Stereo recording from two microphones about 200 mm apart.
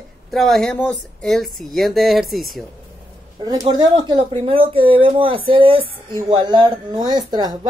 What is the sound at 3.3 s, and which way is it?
Speech, 20° right (ahead or behind).